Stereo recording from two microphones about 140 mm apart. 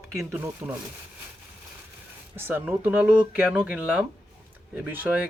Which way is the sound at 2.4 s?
15° right (ahead or behind).